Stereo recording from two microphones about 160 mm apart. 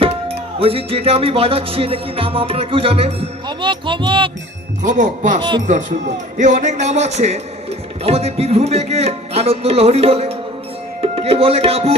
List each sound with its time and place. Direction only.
0.0 s music: 35° right (ahead or behind)
4.9 s a man's voice: 50° right (ahead or behind)
5.4 s speech: 25° right (ahead or behind)
6.3 s a man's voice: 50° right (ahead or behind)
8.0 s music: 40° right (ahead or behind)
11.0 s speech: 40° right (ahead or behind)